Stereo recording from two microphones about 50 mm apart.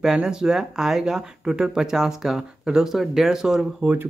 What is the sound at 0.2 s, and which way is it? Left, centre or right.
Speech, centre.